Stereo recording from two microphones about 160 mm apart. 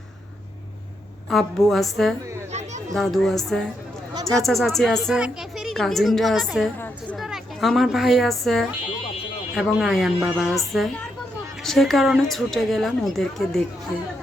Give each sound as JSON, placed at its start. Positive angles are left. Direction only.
{"t": 1.3, "sound": "a woman's voice", "side_deg": 0}
{"t": 2.5, "sound": "chatter", "side_deg": -45}
{"t": 2.9, "sound": "a woman's voice", "side_deg": 0}
{"t": 6.7, "sound": "a sound", "side_deg": 10}
{"t": 7.2, "sound": "a woman's voice", "side_deg": 0}